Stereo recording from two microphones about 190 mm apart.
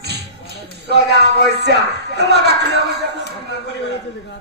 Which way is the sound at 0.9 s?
60° right (ahead or behind).